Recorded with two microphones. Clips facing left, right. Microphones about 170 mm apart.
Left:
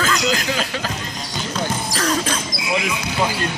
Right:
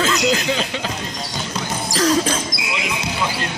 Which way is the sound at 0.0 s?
25° right (ahead or behind).